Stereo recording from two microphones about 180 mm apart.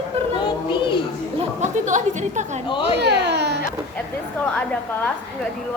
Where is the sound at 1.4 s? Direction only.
40° right (ahead or behind).